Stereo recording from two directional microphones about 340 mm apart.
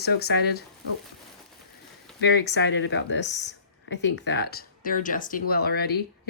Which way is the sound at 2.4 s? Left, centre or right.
Left.